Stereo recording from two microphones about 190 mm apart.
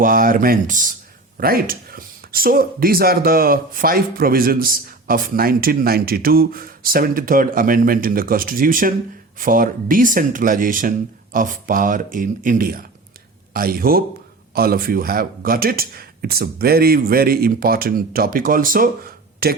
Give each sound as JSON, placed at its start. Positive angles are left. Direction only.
{"t": 0.0, "sound": "speech", "side_deg": -45}